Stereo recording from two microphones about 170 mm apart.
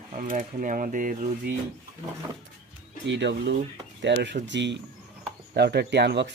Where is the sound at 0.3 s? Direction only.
50° right (ahead or behind).